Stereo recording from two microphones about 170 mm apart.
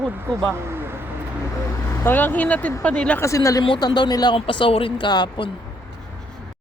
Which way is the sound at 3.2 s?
20° left (ahead or behind).